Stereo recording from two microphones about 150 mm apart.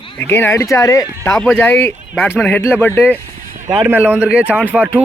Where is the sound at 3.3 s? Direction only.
70° right (ahead or behind).